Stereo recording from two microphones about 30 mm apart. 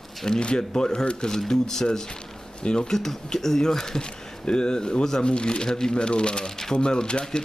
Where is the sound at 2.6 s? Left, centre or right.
Left.